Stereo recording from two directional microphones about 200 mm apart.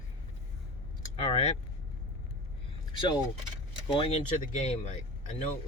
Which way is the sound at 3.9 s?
30° left (ahead or behind).